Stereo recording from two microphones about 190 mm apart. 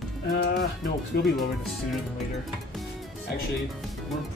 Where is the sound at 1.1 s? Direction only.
55° left (ahead or behind).